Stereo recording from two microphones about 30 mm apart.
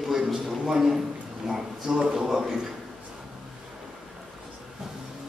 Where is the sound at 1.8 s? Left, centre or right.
Right.